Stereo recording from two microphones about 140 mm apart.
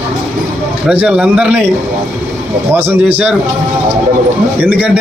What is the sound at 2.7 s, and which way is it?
Speech, 10° right (ahead or behind).